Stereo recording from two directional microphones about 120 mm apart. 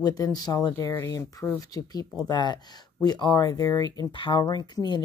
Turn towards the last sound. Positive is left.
turn(degrees=35)  # may be behind; listen again after turning